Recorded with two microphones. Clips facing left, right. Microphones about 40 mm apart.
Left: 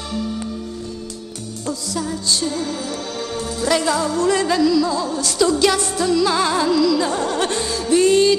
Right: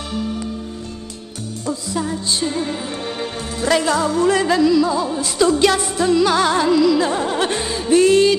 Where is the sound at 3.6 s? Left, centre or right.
Right.